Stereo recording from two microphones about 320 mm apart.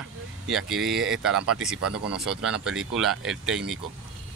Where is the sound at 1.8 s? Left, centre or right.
Right.